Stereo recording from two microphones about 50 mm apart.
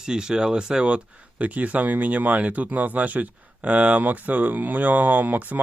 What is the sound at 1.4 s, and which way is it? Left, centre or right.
Speech, right.